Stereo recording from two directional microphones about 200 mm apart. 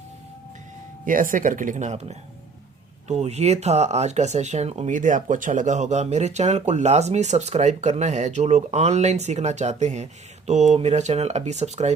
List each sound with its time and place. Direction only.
1.0 s speech: 40° right (ahead or behind)